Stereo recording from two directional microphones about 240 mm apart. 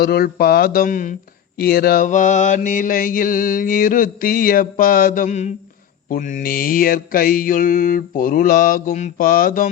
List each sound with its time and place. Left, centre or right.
0.0 s mantra: left